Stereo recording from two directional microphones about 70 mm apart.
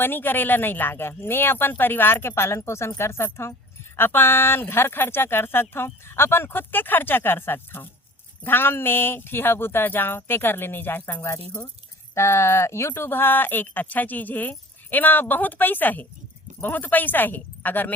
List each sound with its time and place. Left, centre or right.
0.0 s speech: left